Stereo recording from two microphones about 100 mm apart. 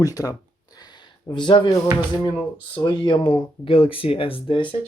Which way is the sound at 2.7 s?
50° left (ahead or behind).